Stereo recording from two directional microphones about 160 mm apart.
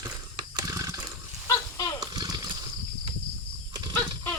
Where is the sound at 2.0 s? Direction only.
25° right (ahead or behind).